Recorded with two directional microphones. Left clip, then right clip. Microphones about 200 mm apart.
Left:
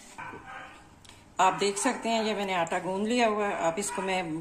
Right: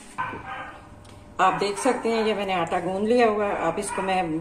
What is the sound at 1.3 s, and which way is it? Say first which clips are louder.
A woman's voice: right 3 dB; 55° left (ahead or behind).